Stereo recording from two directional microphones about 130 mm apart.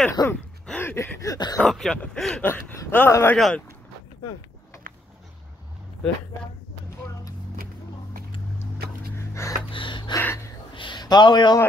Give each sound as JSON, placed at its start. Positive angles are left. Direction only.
{"t": 0.1, "sound": "speech", "side_deg": 20}
{"t": 0.7, "sound": "a sound", "side_deg": 15}
{"t": 1.6, "sound": "speech", "side_deg": 5}
{"t": 2.4, "sound": "speech", "side_deg": 20}
{"t": 3.3, "sound": "speech", "side_deg": 0}
{"t": 4.9, "sound": "a sound", "side_deg": -90}
{"t": 9.3, "sound": "gasp", "side_deg": 20}
{"t": 9.7, "sound": "gasp", "side_deg": 40}
{"t": 10.1, "sound": "speech", "side_deg": 20}
{"t": 10.7, "sound": "a sound", "side_deg": 40}